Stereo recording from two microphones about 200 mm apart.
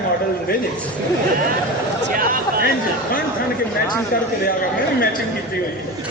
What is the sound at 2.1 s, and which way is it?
Speech, 45° right (ahead or behind).